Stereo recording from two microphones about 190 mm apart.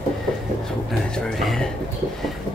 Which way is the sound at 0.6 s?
Centre (ahead or behind).